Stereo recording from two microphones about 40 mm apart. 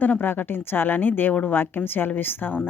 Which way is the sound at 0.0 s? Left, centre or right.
Left.